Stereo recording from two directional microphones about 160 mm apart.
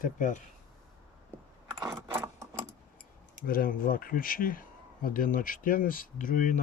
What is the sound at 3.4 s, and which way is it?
A man's voice, 60° left (ahead or behind).